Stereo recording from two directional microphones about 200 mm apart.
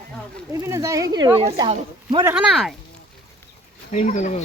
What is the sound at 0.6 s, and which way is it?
Speech, 15° right (ahead or behind).